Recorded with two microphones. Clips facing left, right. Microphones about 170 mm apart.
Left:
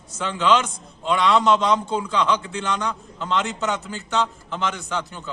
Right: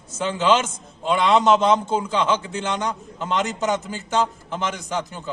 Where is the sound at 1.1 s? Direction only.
20° right (ahead or behind).